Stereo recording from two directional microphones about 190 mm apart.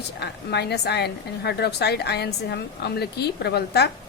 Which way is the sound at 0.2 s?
60° left (ahead or behind).